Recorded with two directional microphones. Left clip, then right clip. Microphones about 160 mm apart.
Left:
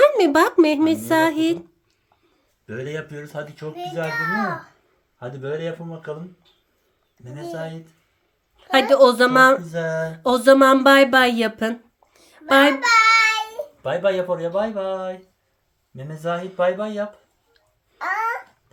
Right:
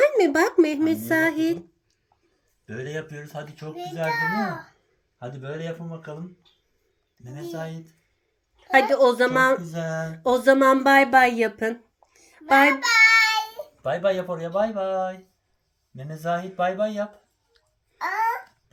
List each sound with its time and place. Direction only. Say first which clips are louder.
0.0 s a child's voice: left 4 dB; 25° left (ahead or behind)
2.6 s a child's voice: left 3 dB; 25° left (ahead or behind)
7.3 s speech: left 3 dB; 15° left (ahead or behind)
8.7 s speech: left 4 dB; 25° left (ahead or behind)
17.9 s babbling: left 1 dB; 5° left (ahead or behind)